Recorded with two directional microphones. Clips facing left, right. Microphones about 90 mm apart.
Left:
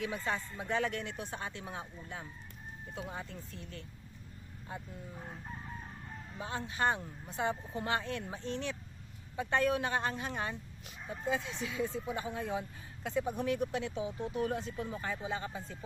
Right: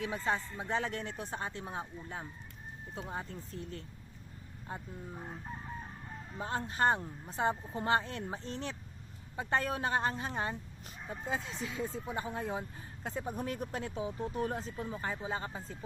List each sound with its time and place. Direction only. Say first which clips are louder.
0.3 s speech: right 4 dB; 30° right (ahead or behind)
5.1 s chicken: right 2 dB; 10° right (ahead or behind)
6.4 s speech: right 2 dB; 40° right (ahead or behind)